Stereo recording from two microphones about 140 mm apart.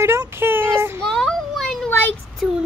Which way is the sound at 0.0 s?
20° right (ahead or behind).